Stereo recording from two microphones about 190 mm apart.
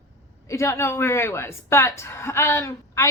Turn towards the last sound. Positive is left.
turn(degrees=15)  # may be behind; listen again after turning